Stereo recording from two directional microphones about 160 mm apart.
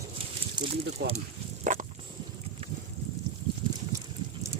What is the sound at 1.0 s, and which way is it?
Speech, 90° right.